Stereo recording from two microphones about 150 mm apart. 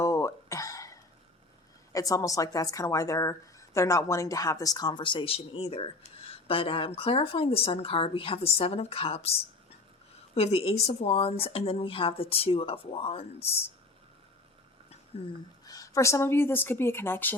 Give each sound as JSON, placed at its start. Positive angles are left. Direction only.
{"t": 0.0, "sound": "a sound", "side_deg": 20}
{"t": 1.9, "sound": "speech", "side_deg": 20}
{"t": 10.3, "sound": "speech", "side_deg": 40}
{"t": 15.1, "sound": "speech", "side_deg": 40}
{"t": 15.6, "sound": "speech", "side_deg": 25}